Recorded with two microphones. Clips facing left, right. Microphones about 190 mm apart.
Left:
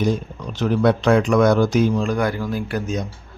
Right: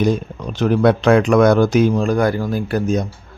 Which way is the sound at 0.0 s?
60° right (ahead or behind).